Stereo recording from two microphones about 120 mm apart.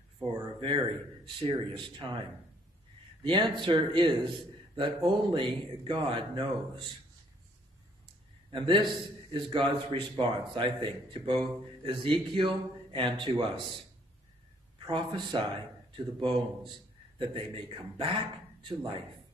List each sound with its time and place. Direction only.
0.2 s a man's voice: 40° right (ahead or behind)
3.3 s a man's voice: 40° right (ahead or behind)
8.5 s a man's voice: 40° right (ahead or behind)
14.9 s a man's voice: 40° right (ahead or behind)